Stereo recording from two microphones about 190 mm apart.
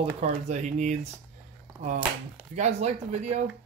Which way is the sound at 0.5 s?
40° right (ahead or behind).